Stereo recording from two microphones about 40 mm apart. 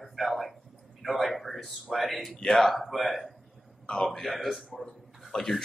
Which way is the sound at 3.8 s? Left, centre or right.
Centre.